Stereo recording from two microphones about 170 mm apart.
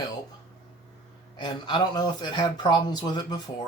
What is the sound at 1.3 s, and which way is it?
Speech, 25° left (ahead or behind).